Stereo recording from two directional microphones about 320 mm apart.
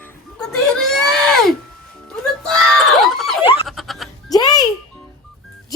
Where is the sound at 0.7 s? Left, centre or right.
Centre.